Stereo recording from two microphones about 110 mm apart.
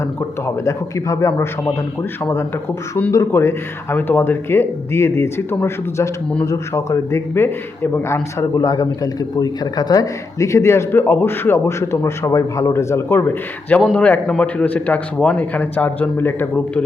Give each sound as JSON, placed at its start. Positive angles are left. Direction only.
{"t": 0.4, "sound": "a man's voice", "side_deg": 25}
{"t": 3.1, "sound": "a man's voice", "side_deg": 30}